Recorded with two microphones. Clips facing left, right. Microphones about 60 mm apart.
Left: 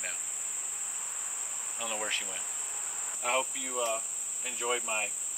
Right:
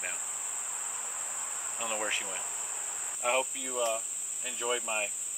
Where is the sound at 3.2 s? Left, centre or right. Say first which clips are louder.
Right 1 dB; centre.